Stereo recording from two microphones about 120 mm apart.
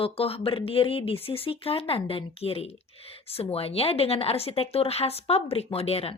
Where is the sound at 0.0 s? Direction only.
50° left (ahead or behind).